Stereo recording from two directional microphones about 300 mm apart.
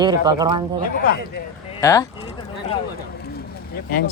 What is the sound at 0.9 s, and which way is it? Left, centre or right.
Speech, left.